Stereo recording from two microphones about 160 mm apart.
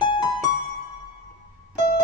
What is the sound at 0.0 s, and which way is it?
Music, 30° left (ahead or behind).